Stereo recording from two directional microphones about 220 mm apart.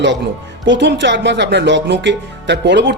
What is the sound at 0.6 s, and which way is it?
Speech, 55° right (ahead or behind).